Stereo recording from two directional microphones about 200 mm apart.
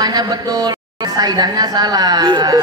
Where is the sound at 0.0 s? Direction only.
20° right (ahead or behind).